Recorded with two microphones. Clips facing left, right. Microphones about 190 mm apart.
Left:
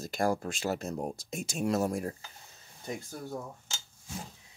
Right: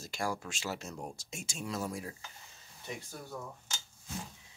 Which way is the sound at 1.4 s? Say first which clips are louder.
Left 9 dB; 60° left (ahead or behind).